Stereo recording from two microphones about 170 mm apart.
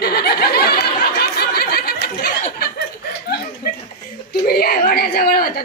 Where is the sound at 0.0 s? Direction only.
65° left (ahead or behind).